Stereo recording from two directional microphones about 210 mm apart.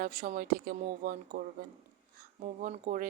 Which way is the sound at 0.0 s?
40° right (ahead or behind).